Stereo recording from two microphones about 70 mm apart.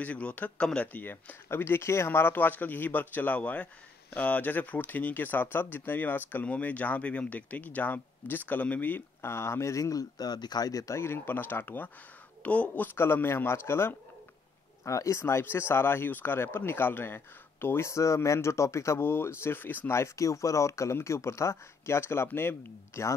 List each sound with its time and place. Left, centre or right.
0.0 s speech: left
10.7 s speech: left
11.0 s speech: left
19.9 s speech: left